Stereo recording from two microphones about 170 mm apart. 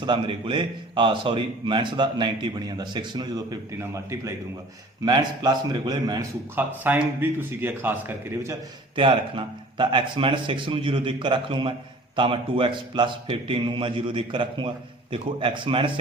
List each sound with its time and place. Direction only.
0.0 s a man's voice: 30° right (ahead or behind)
6.6 s a man's voice: 10° right (ahead or behind)
9.0 s a man's voice: 30° right (ahead or behind)